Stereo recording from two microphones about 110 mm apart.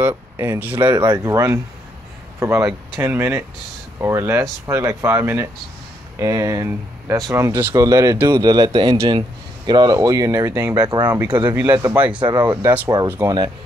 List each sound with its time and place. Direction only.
0.0 s speech: 20° right (ahead or behind)
0.9 s speech: 40° right (ahead or behind)
2.4 s speech: 25° right (ahead or behind); by 11.5 s 40° right (ahead or behind)
11.5 s speech: 25° right (ahead or behind)
11.9 s speech: 10° right (ahead or behind)
12.2 s speech: 45° right (ahead or behind)
12.4 s speech: 20° right (ahead or behind)